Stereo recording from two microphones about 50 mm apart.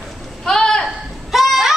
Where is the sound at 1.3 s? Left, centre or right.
Centre.